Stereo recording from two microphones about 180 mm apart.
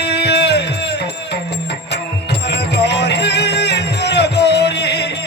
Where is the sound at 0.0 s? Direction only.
70° left (ahead or behind).